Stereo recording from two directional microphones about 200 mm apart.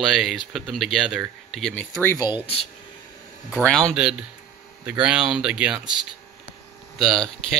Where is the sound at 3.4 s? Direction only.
5° left (ahead or behind).